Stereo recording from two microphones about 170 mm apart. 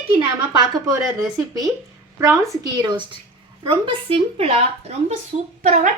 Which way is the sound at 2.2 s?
20° right (ahead or behind).